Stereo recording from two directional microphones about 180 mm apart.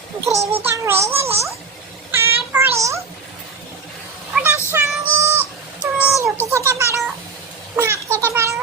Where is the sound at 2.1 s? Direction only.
15° right (ahead or behind).